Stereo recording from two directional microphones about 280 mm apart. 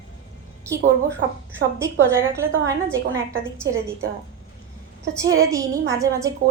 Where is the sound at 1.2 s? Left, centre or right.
Right.